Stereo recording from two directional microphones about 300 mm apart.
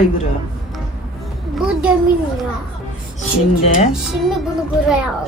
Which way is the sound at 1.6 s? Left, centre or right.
Centre.